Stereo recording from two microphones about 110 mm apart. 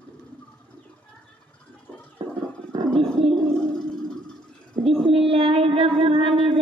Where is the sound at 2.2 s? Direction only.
40° right (ahead or behind).